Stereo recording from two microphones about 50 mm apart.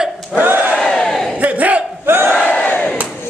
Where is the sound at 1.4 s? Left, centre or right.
Right.